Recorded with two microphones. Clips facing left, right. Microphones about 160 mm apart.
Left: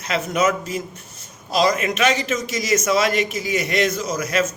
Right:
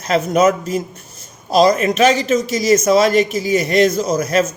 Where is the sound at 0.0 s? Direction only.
40° right (ahead or behind).